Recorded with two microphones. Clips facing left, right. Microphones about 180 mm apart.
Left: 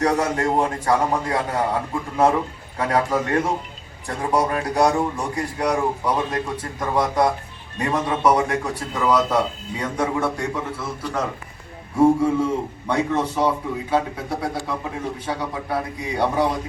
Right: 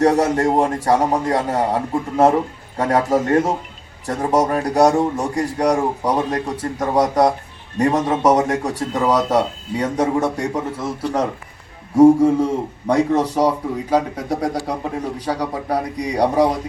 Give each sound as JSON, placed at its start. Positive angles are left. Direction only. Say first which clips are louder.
{"t": 0.0, "sound": "a man's voice", "louder": "right 5 dB", "side_deg": -40}